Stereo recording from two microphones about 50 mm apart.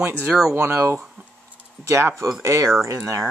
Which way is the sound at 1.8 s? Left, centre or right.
Right.